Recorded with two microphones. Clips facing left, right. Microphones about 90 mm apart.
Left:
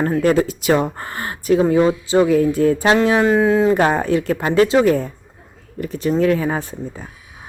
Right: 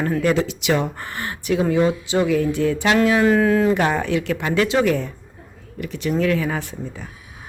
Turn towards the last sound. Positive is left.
turn(degrees=35)  # may be behind; listen again after turning